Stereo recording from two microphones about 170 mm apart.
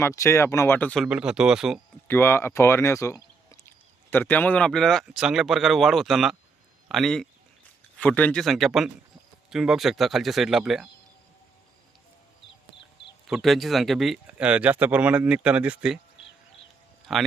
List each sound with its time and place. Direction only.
0.0 s speech: 15° left (ahead or behind)
1.0 s speech: 5° right (ahead or behind)
2.0 s speech: 15° left (ahead or behind); by 10.8 s centre (ahead or behind)
13.2 s speech: centre (ahead or behind)
17.1 s speech: centre (ahead or behind)